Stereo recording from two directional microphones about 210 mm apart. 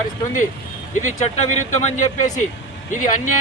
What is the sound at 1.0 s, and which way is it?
Speech, 35° left (ahead or behind).